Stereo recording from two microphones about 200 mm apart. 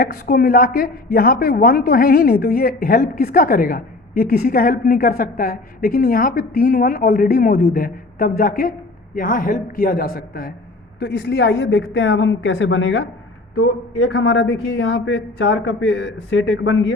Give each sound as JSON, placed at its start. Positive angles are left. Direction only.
{"t": 0.0, "sound": "a woman's voice", "side_deg": 50}
{"t": 11.0, "sound": "speech", "side_deg": 65}
{"t": 13.6, "sound": "speech", "side_deg": 90}